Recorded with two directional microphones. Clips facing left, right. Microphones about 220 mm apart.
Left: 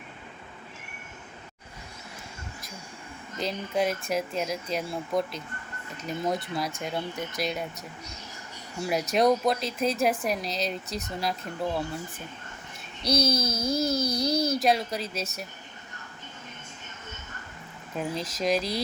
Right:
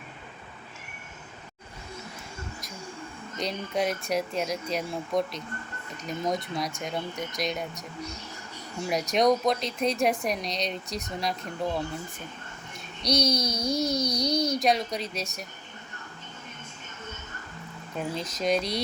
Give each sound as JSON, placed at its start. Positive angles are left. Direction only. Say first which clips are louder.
{"t": 3.4, "sound": "speech", "louder": "left 1 dB", "side_deg": 0}
{"t": 9.1, "sound": "speech", "louder": "even", "side_deg": 5}
{"t": 13.0, "sound": "speech", "louder": "even", "side_deg": 5}
{"t": 17.9, "sound": "speech", "louder": "left 1 dB", "side_deg": 0}